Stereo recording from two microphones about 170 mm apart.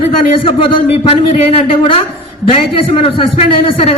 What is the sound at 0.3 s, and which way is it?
A man's voice, 35° left (ahead or behind).